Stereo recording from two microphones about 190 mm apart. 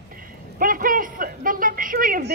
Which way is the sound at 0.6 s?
45° right (ahead or behind).